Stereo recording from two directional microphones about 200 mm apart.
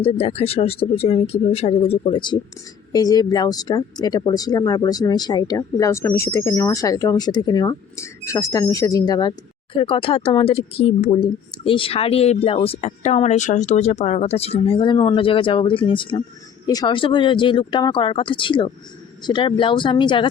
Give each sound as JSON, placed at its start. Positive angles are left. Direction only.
{"t": 0.0, "sound": "speech", "side_deg": 30}